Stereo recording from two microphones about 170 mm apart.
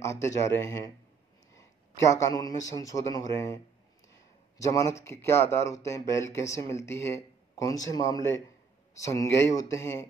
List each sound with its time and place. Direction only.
0.0 s speech: 15° left (ahead or behind)
1.5 s a man's voice: 20° left (ahead or behind)